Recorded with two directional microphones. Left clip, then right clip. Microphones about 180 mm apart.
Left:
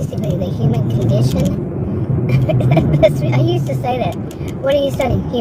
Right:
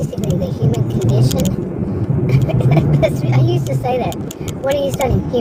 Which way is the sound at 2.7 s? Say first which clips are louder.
Left 4 dB; 50° left (ahead or behind).